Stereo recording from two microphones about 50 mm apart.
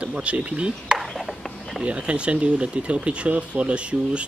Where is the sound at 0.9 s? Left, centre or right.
Centre.